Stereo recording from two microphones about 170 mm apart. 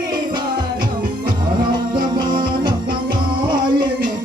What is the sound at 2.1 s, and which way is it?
Music, 25° right (ahead or behind).